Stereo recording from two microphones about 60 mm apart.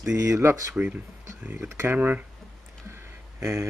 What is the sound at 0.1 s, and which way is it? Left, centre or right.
Speech, right.